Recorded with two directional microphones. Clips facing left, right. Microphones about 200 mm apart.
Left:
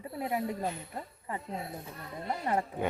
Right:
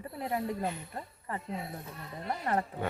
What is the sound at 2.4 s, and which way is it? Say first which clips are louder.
Speech: left 1 dB; 15° left (ahead or behind).